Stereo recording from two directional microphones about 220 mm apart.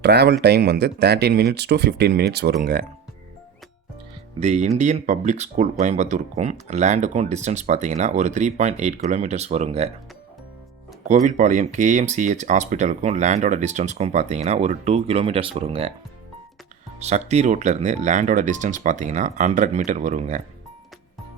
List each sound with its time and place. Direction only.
0.0 s speech: 50° right (ahead or behind)
4.4 s speech: 30° right (ahead or behind)
11.1 s speech: 35° right (ahead or behind)
17.0 s speech: 30° right (ahead or behind)